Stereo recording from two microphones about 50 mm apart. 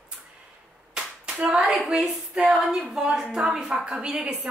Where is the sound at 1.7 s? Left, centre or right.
Centre.